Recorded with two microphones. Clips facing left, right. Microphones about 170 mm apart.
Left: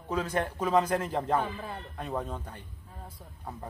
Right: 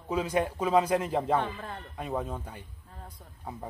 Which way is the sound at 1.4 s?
5° left (ahead or behind).